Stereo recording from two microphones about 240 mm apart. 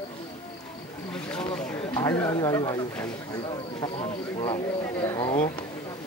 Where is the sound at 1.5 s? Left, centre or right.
Centre.